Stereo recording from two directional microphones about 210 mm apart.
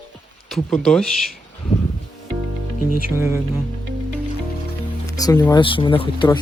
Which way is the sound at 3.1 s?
10° right (ahead or behind).